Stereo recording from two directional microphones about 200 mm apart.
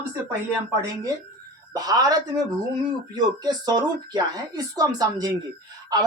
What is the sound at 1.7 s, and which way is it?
Speech, 20° right (ahead or behind).